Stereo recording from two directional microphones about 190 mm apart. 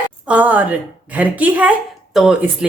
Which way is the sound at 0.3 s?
10° right (ahead or behind).